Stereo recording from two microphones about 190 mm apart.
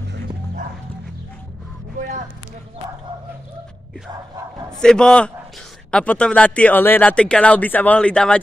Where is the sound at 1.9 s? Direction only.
45° right (ahead or behind).